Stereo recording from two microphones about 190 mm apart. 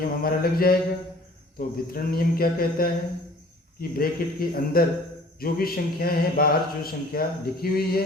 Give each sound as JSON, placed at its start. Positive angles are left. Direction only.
{"t": 0.2, "sound": "speech", "side_deg": 50}